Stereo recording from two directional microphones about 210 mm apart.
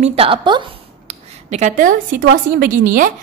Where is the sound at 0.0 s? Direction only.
25° right (ahead or behind).